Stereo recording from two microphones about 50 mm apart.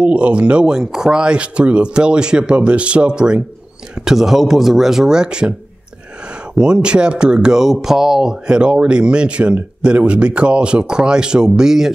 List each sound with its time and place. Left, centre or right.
0.0 s speech: right
6.5 s speech: centre